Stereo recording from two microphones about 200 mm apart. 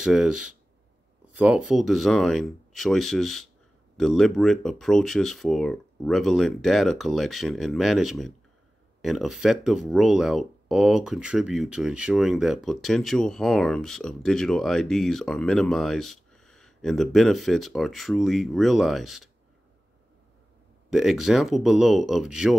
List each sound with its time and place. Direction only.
0.0 s speech: centre (ahead or behind)
20.9 s speech: centre (ahead or behind)